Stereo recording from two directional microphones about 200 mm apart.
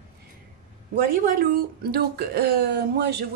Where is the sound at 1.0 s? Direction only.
45° right (ahead or behind).